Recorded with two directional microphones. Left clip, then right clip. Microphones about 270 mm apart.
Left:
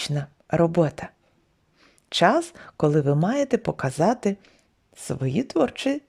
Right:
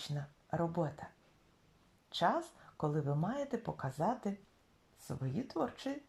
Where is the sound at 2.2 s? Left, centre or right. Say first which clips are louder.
Left 14 dB; left.